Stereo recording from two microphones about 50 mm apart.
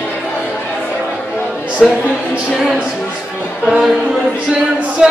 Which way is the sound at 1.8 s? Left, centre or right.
Centre.